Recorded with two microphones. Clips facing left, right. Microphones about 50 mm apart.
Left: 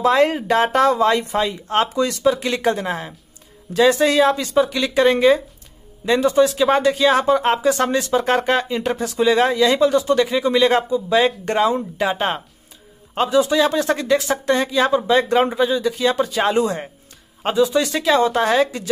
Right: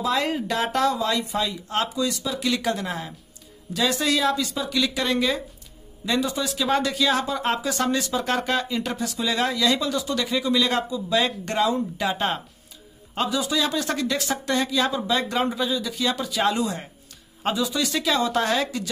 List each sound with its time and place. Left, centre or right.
0.0 s speech: left